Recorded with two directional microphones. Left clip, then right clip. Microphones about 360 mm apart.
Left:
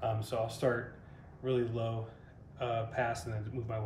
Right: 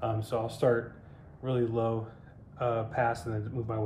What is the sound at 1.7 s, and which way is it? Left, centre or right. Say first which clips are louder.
Speech: right 7 dB; centre.